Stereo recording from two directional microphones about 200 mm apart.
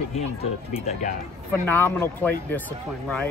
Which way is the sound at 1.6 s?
10° left (ahead or behind).